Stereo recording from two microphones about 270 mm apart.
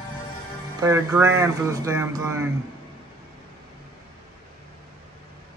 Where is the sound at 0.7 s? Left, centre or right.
Centre.